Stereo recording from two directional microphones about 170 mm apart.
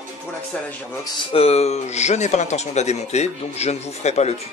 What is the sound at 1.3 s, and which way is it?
Speech, 35° left (ahead or behind).